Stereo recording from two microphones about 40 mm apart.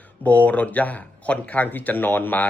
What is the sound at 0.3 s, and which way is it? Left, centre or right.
Speech, left.